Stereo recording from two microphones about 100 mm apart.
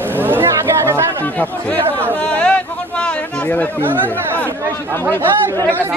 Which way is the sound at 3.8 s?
20° right (ahead or behind).